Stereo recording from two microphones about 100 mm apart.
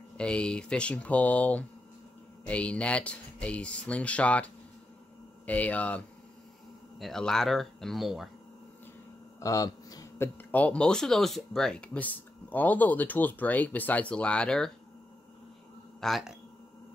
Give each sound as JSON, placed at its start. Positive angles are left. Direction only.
{"t": 0.2, "sound": "speech", "side_deg": 10}
{"t": 5.5, "sound": "speech", "side_deg": 15}
{"t": 9.4, "sound": "a sound", "side_deg": 35}
{"t": 10.1, "sound": "speech", "side_deg": 20}
{"t": 16.0, "sound": "speech", "side_deg": 0}